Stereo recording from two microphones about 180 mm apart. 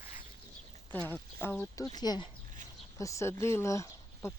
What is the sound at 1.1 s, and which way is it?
Speech, 10° left (ahead or behind).